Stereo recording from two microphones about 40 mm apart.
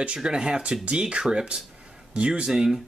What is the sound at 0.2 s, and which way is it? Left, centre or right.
Speech, centre.